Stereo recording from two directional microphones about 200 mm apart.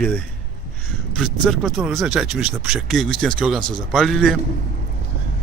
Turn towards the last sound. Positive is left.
turn(degrees=0)  # may be behind; listen again after turning